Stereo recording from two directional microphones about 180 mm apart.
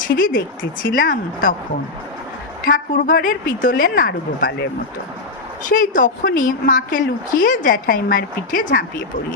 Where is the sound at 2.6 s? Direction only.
50° left (ahead or behind).